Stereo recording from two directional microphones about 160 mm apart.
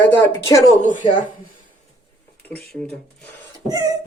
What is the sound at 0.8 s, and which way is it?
Speech, 55° left (ahead or behind).